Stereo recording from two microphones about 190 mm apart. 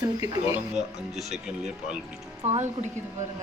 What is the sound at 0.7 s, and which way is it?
Speech, centre (ahead or behind).